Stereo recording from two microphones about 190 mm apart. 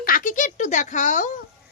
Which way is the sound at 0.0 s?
45° left (ahead or behind).